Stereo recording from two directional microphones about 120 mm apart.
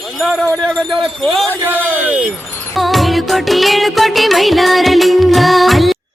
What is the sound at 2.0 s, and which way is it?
Speech, 10° right (ahead or behind).